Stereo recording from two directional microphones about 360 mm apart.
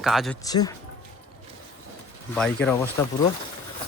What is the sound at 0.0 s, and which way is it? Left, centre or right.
Speech, centre.